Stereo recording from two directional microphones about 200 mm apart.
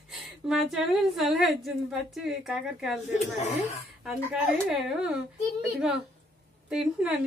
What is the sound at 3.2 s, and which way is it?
Speech, 35° left (ahead or behind).